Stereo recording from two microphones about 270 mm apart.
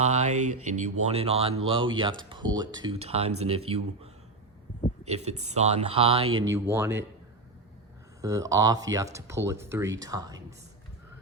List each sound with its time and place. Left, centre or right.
0.0 s speech: right
0.3 s speech: right
0.6 s speech: right
6.2 s speech: right
6.5 s speech: centre
8.2 s speech: centre